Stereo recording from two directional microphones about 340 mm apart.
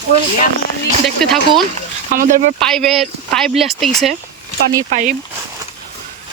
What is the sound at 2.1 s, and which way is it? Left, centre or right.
Speech, right.